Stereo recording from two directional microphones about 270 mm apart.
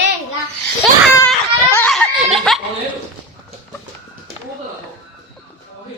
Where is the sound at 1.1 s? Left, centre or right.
Centre.